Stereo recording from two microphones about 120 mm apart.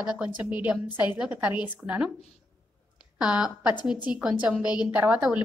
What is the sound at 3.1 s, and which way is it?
A woman's voice, 10° right (ahead or behind).